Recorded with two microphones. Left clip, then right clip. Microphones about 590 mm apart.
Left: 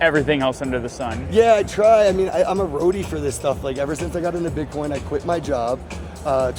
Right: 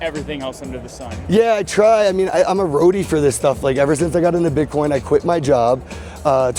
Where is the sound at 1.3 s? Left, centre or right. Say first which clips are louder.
Even; right.